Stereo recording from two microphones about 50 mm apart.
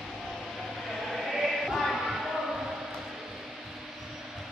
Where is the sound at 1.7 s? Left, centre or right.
Centre.